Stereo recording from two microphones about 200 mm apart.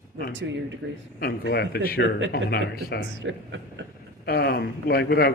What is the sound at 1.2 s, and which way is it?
A man's voice, 50° left (ahead or behind).